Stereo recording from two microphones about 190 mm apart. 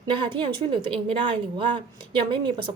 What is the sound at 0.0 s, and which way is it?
A woman's voice, 25° right (ahead or behind).